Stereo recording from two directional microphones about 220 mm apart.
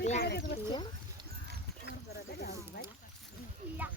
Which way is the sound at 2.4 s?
45° left (ahead or behind).